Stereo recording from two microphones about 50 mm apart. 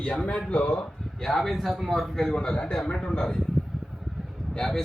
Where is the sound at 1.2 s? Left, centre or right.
Centre.